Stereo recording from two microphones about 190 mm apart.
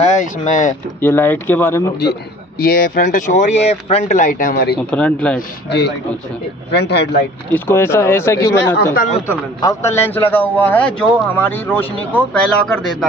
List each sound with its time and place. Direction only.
0.0 s speech: 40° left (ahead or behind)
1.0 s a man's voice: 10° left (ahead or behind)
2.6 s speech: 50° left (ahead or behind)
4.9 s a man's voice: 5° left (ahead or behind)
5.7 s speech: 60° left (ahead or behind)
7.5 s a man's voice: 10° left (ahead or behind)
8.9 s speech: 45° left (ahead or behind)
9.3 s a man's voice: 15° left (ahead or behind)